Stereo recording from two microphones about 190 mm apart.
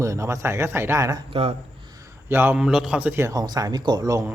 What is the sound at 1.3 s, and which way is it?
Speech, 30° right (ahead or behind).